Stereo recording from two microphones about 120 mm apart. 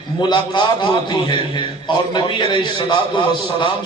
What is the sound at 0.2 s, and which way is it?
A man's voice, 40° left (ahead or behind).